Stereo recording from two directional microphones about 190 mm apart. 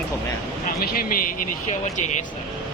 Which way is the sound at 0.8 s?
50° left (ahead or behind).